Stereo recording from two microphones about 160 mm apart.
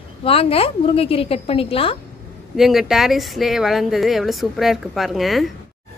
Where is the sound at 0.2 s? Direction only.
35° left (ahead or behind).